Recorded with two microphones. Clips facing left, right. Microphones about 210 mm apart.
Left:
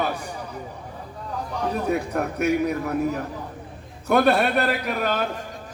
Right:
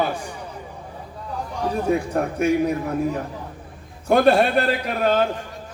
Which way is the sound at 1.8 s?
30° right (ahead or behind).